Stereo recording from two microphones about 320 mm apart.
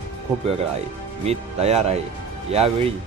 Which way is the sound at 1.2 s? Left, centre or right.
Centre.